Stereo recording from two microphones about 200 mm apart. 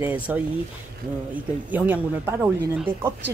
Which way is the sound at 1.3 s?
10° right (ahead or behind).